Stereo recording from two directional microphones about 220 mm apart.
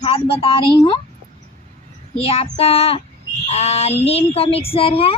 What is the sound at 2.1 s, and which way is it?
Speech, 25° left (ahead or behind).